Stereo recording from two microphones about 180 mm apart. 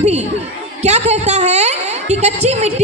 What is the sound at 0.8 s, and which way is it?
A woman's voice, 35° right (ahead or behind).